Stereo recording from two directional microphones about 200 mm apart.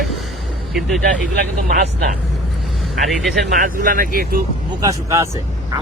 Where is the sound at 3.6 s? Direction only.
45° right (ahead or behind).